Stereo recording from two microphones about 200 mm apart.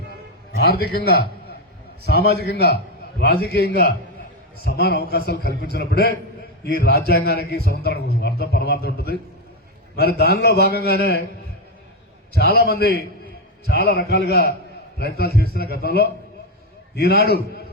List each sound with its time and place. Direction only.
0.5 s a man's voice: 50° left (ahead or behind)
12.3 s speech: 55° left (ahead or behind)